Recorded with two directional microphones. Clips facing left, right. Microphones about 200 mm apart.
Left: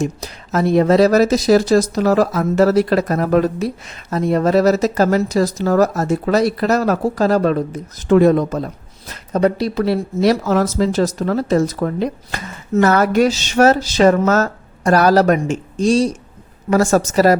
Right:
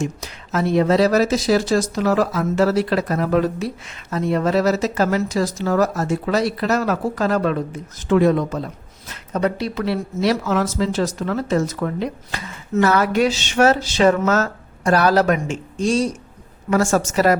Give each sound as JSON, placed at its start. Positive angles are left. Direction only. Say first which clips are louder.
{"t": 0.0, "sound": "speech", "louder": "left 4 dB", "side_deg": 40}